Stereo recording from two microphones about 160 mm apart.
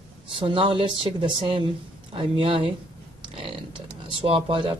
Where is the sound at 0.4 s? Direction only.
30° right (ahead or behind).